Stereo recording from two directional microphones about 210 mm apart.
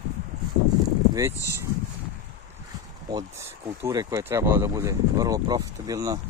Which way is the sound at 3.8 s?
15° right (ahead or behind).